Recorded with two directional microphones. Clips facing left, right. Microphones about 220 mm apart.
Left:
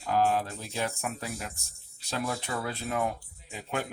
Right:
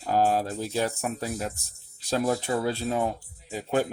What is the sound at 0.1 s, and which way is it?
Speech, 35° right (ahead or behind).